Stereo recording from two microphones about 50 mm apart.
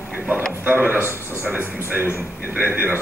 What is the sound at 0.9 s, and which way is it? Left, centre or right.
Speech, left.